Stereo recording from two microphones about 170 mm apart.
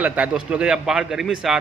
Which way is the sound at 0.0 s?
5° right (ahead or behind).